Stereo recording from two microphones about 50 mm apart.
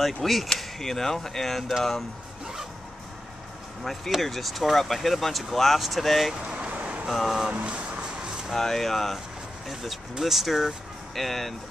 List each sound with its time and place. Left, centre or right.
0.0 s speech: centre
3.8 s speech: centre
6.3 s vehicle: centre
6.7 s a sound: right
7.1 s speech: centre
7.6 s a sound: right
8.5 s speech: centre